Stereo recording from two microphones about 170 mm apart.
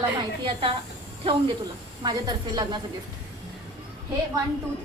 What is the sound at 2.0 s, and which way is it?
Speech, 25° right (ahead or behind).